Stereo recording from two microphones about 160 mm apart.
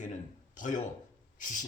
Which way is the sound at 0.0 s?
50° left (ahead or behind).